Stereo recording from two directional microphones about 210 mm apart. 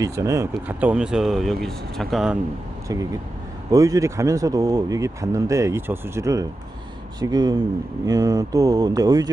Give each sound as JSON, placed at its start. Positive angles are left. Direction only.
{"t": 0.0, "sound": "speech", "side_deg": -15}
{"t": 3.7, "sound": "speech", "side_deg": -15}